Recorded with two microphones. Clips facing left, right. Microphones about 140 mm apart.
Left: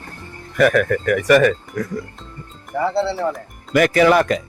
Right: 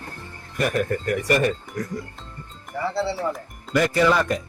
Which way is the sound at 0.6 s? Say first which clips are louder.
Left 7 dB; 80° left.